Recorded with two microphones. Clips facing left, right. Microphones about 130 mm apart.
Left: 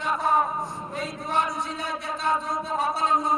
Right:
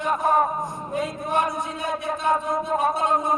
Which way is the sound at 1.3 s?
50° right (ahead or behind).